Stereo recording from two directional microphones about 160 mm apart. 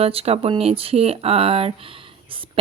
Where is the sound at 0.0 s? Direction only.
35° right (ahead or behind).